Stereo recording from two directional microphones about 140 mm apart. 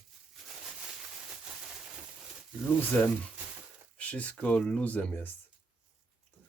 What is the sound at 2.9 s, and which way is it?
Speech, 15° left (ahead or behind).